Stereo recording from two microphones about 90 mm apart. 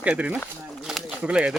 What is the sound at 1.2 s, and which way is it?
Speech, 10° right (ahead or behind).